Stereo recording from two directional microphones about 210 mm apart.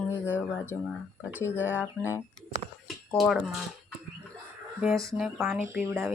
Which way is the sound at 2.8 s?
Centre (ahead or behind).